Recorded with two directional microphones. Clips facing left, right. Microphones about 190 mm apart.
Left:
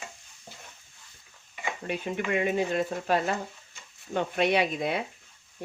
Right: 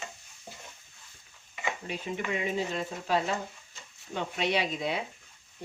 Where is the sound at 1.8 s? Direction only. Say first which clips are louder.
Left 7 dB; 60° left (ahead or behind).